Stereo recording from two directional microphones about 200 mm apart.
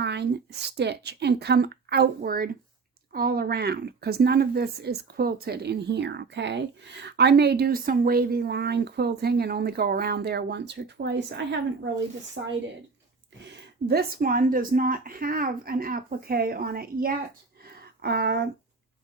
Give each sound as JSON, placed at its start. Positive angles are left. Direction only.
{"t": 0.0, "sound": "a sound", "side_deg": -55}
{"t": 0.8, "sound": "speech", "side_deg": -55}
{"t": 12.4, "sound": "a woman's voice", "side_deg": -60}
{"t": 13.8, "sound": "speech", "side_deg": -50}